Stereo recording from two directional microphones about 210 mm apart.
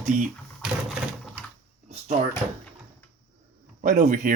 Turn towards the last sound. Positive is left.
turn(degrees=-40)  # may be behind; listen again after turning